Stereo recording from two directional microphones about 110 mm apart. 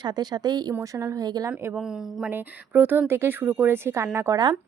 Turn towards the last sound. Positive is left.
turn(degrees=-25)  # may be behind; listen again after turning